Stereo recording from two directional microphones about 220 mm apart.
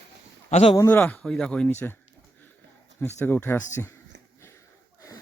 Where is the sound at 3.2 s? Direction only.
10° left (ahead or behind).